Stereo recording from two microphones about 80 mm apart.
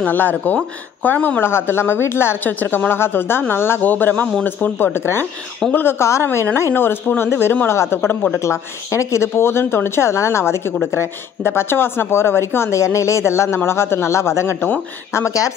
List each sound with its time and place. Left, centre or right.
0.0 s a woman's voice: left